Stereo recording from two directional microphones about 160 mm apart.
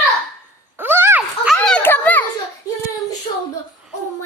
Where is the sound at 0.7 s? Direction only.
15° right (ahead or behind).